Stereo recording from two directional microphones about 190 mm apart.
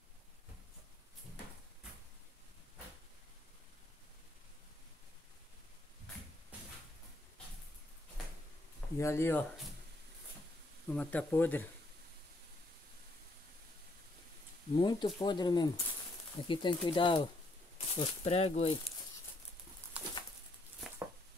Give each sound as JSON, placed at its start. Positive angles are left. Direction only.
{"t": 8.9, "sound": "speech", "side_deg": 15}
{"t": 10.9, "sound": "speech", "side_deg": 5}
{"t": 14.8, "sound": "speech", "side_deg": 25}